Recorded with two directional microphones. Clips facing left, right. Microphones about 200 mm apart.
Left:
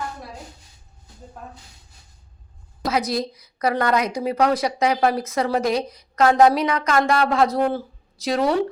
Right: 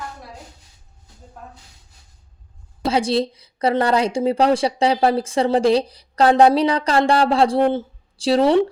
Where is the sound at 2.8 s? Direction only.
30° right (ahead or behind).